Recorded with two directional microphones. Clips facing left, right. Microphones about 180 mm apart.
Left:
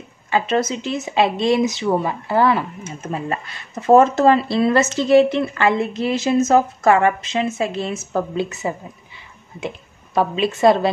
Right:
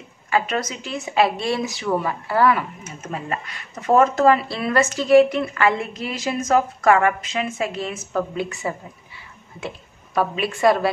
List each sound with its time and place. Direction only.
0.3 s speech: 25° left (ahead or behind)